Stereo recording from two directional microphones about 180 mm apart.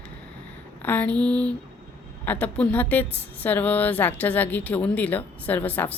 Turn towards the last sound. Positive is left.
turn(degrees=10)  # may be behind; listen again after turning